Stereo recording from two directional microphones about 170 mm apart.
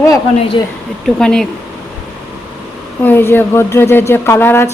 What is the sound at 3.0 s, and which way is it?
Speech, 10° left (ahead or behind).